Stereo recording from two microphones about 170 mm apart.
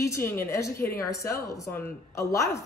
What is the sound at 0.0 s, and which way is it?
A woman's voice, 15° left (ahead or behind).